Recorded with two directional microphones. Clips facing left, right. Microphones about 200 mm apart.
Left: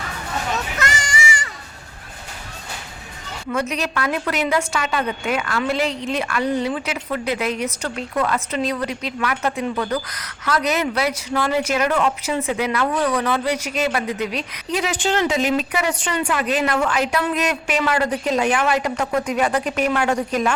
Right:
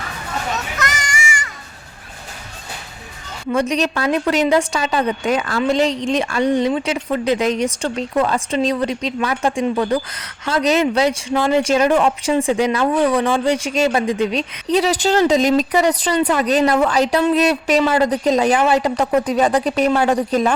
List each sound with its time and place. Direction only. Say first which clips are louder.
0.8 s children playing: even; 30° left (ahead or behind)
3.5 s a woman's voice: right 5 dB; 30° right (ahead or behind)